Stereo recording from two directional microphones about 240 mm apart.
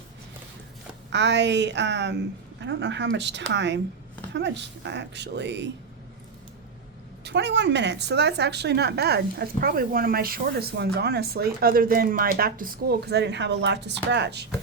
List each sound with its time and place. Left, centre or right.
1.1 s a woman's voice: right
7.3 s a woman's voice: right